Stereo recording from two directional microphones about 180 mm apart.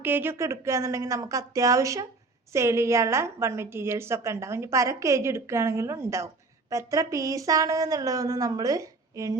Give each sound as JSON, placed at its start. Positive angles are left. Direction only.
{"t": 0.0, "sound": "a woman's voice", "side_deg": -10}